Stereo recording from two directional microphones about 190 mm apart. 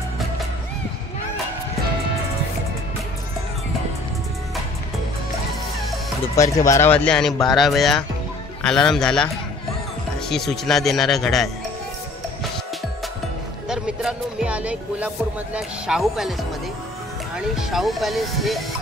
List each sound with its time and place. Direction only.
6.4 s speech: 15° left (ahead or behind)
13.7 s music: 5° right (ahead or behind)
15.5 s speech: centre (ahead or behind)
17.6 s speech: centre (ahead or behind)